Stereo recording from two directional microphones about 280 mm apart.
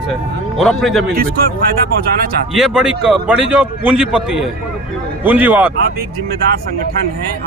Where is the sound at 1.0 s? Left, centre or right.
Right.